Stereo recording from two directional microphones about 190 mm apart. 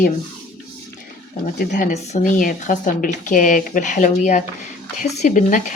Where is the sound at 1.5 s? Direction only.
40° left (ahead or behind).